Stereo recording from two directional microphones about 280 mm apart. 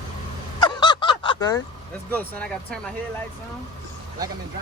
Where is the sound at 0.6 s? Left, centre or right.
Centre.